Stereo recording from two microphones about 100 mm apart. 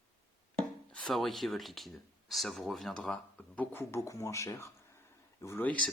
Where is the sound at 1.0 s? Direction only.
Centre (ahead or behind); by 5.6 s 30° left (ahead or behind).